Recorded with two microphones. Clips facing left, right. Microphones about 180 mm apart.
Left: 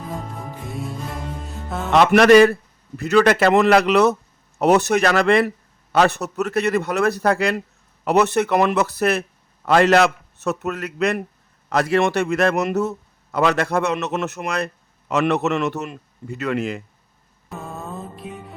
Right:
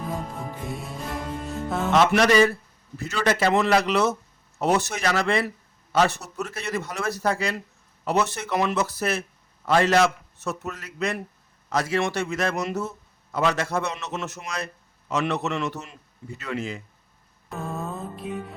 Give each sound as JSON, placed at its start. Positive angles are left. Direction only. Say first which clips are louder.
{"t": 0.1, "sound": "music", "louder": "even", "side_deg": 0}
{"t": 1.9, "sound": "a man's voice", "louder": "left 7 dB", "side_deg": 65}
{"t": 17.5, "sound": "music", "louder": "right 1 dB", "side_deg": 0}